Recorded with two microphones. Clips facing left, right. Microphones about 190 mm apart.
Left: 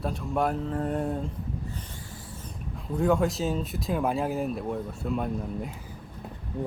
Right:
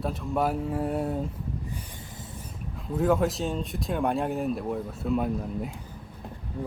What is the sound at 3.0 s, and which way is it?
Speech, centre (ahead or behind).